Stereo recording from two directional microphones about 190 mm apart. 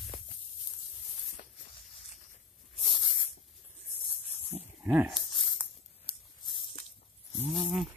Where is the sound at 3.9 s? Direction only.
30° left (ahead or behind).